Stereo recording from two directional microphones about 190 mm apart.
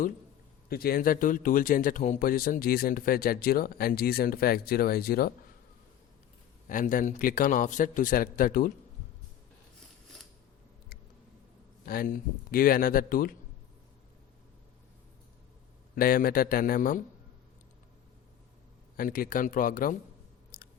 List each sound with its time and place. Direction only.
0.7 s speech: 55° left (ahead or behind)
6.7 s speech: 45° left (ahead or behind)
11.9 s speech: 50° left (ahead or behind)
16.0 s speech: 50° left (ahead or behind)
18.9 s speech: 50° left (ahead or behind)
20.5 s chewing: 50° left (ahead or behind)